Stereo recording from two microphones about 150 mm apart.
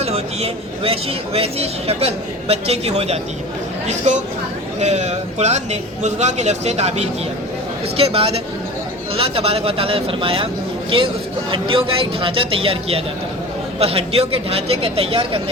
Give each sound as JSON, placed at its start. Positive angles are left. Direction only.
{"t": 0.0, "sound": "speech", "side_deg": -40}
{"t": 11.5, "sound": "speech", "side_deg": -35}